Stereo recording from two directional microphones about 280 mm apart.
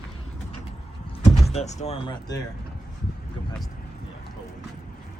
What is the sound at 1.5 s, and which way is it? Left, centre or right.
Speech, left.